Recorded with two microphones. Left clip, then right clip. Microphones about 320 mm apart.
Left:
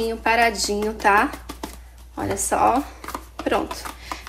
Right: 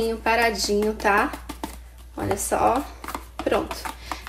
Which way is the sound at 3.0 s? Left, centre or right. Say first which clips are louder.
Even; centre.